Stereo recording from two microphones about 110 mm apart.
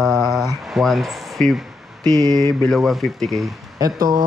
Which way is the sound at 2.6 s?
Centre (ahead or behind).